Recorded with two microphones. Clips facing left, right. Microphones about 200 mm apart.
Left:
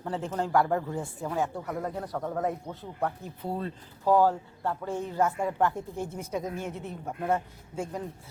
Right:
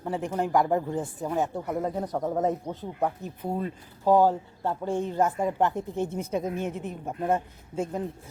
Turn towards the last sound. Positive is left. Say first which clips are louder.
# right 4 dB
turn(degrees=-20)  # may be behind; listen again after turning